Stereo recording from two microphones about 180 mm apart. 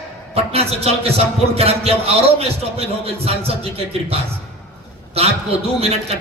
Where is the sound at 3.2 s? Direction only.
35° right (ahead or behind).